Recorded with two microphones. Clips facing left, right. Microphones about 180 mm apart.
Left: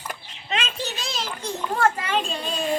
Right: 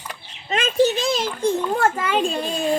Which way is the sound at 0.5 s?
50° right (ahead or behind).